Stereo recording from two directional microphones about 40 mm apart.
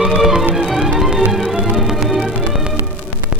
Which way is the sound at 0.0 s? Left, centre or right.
Centre.